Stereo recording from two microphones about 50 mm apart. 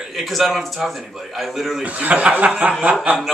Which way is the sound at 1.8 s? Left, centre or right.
Right.